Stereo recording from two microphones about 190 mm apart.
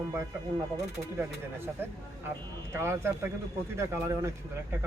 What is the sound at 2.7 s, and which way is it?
Speech, 15° right (ahead or behind).